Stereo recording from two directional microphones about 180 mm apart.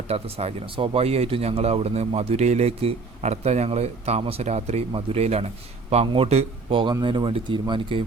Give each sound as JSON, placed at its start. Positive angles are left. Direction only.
{"t": 0.1, "sound": "speech", "side_deg": -35}